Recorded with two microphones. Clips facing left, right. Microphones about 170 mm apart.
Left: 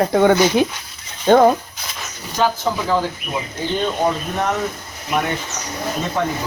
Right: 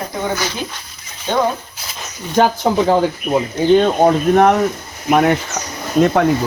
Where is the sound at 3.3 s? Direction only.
40° right (ahead or behind).